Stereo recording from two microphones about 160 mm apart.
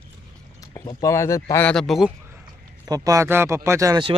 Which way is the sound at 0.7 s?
20° left (ahead or behind).